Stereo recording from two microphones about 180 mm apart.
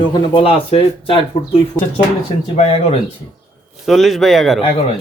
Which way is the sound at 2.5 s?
35° left (ahead or behind).